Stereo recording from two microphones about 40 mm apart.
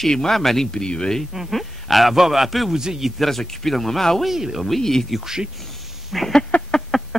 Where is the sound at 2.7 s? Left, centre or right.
Centre.